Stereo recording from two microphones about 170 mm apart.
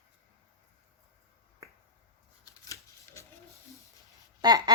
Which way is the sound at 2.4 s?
20° left (ahead or behind).